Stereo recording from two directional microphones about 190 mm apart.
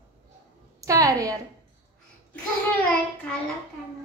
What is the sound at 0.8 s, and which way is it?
Speech, 15° right (ahead or behind).